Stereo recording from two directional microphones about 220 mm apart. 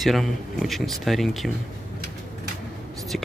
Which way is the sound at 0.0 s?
Centre (ahead or behind).